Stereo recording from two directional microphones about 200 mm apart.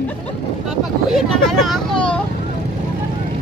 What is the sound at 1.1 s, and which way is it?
Speech, centre (ahead or behind).